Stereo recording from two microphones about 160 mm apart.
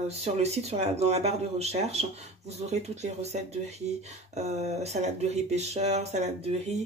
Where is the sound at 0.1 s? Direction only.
40° right (ahead or behind).